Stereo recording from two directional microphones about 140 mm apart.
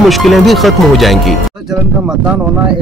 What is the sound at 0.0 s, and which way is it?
Speech, centre (ahead or behind).